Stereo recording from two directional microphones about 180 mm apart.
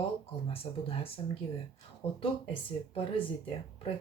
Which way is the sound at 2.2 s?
30° left (ahead or behind).